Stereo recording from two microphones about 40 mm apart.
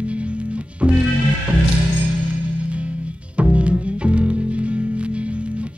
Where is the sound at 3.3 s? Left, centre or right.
Right.